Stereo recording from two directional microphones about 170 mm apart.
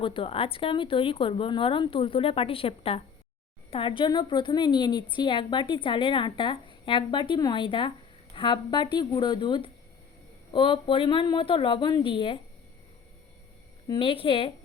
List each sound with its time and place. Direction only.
0.0 s a woman's voice: 30° left (ahead or behind)
13.8 s a woman's voice: 30° left (ahead or behind)